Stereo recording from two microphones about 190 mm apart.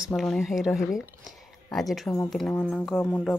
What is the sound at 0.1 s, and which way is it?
Speech, centre (ahead or behind).